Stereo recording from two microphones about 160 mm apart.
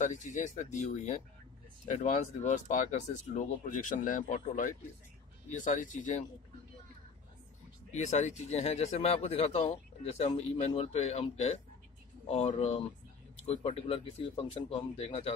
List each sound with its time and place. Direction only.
0.0 s speech: 50° left (ahead or behind)
7.9 s speech: 45° left (ahead or behind)